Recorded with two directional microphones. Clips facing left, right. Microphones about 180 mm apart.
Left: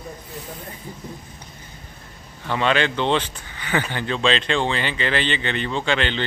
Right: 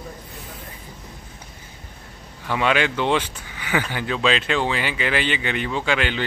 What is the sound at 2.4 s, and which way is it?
Speech, 10° right (ahead or behind).